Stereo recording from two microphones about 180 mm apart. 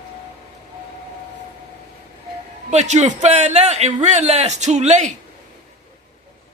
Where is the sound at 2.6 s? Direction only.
40° right (ahead or behind).